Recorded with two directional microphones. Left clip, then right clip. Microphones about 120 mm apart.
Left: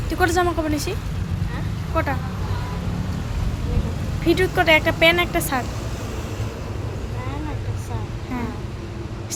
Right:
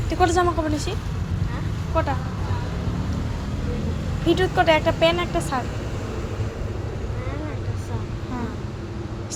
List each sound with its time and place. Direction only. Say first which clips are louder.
0.1 s speech: even; 20° left (ahead or behind)
2.0 s speech: even; 25° left (ahead or behind)
4.3 s speech: left 2 dB; 25° left (ahead or behind)
4.9 s speech: left 3 dB; 45° left (ahead or behind)